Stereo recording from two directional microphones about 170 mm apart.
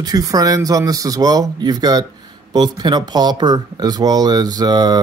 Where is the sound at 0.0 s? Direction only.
20° right (ahead or behind).